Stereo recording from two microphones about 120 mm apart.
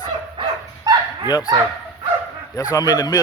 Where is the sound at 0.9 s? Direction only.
35° right (ahead or behind).